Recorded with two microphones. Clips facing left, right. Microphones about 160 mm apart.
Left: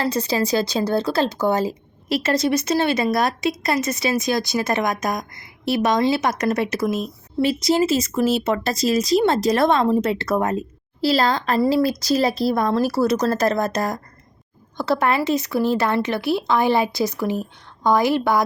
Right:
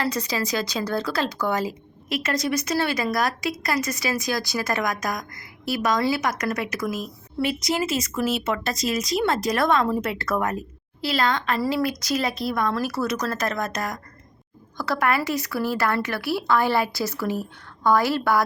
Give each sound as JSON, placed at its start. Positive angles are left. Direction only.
{"t": 0.0, "sound": "speech", "side_deg": 30}